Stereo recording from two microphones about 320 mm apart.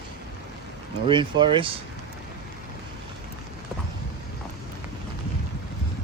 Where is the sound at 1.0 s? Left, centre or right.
Centre.